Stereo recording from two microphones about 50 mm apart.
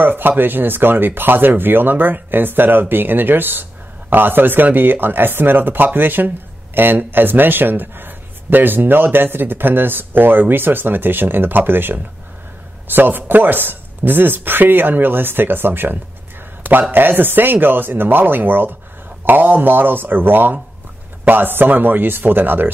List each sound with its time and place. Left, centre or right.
0.0 s speech: right